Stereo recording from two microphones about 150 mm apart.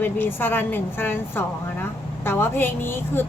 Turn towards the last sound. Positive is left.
turn(degrees=15)  # may be behind; listen again after turning